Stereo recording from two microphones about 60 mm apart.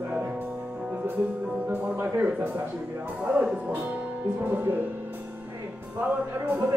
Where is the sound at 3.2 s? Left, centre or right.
Centre.